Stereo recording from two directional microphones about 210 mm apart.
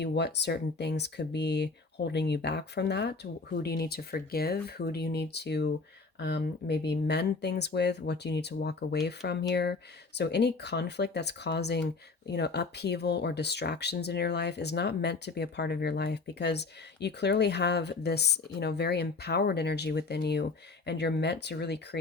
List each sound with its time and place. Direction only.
0.0 s speech: 55° left (ahead or behind)